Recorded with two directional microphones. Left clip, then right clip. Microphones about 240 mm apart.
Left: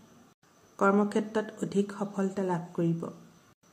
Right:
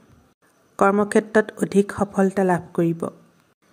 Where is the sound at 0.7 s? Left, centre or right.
Right.